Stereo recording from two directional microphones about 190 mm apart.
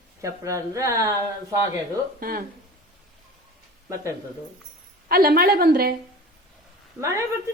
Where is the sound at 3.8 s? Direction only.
15° right (ahead or behind).